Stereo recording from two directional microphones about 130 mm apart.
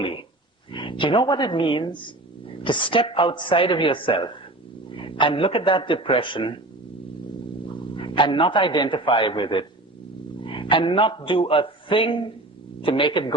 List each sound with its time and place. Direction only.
0.7 s a man's voice: 40° left (ahead or behind)
7.9 s a man's voice: 40° left (ahead or behind)